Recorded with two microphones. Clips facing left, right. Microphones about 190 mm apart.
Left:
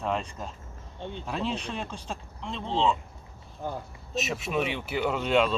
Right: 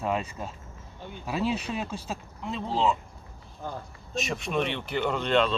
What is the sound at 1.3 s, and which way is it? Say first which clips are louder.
Speech: right 4 dB; 5° right (ahead or behind).